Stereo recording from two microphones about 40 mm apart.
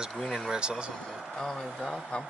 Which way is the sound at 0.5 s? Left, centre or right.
Right.